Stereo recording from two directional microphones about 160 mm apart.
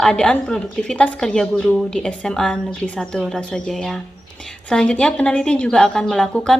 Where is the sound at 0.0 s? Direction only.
5° left (ahead or behind).